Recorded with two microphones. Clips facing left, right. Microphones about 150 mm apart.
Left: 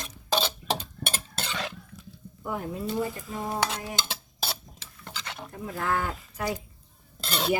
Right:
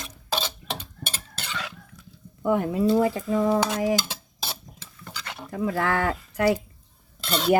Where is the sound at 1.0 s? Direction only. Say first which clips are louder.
Left 3 dB; 45° left (ahead or behind).